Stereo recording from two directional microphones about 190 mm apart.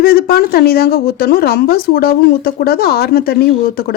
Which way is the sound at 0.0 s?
55° left (ahead or behind).